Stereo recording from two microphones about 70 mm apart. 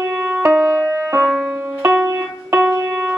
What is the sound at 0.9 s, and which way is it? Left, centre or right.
Music, right.